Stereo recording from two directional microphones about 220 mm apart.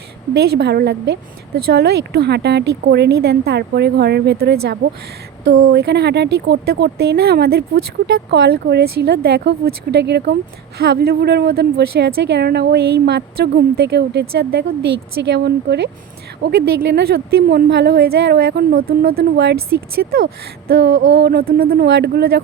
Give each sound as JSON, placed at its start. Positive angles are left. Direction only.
{"t": 0.3, "sound": "a woman's voice", "side_deg": -45}